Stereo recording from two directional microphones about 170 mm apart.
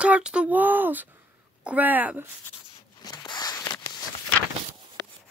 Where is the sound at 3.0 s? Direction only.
25° left (ahead or behind).